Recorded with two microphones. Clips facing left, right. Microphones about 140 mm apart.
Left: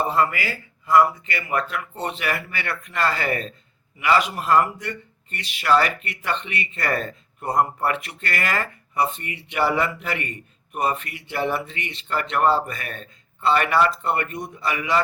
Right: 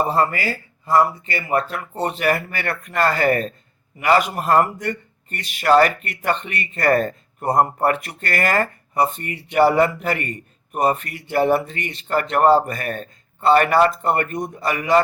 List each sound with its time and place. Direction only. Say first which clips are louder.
0.1 s speech: right 2 dB; 40° right (ahead or behind)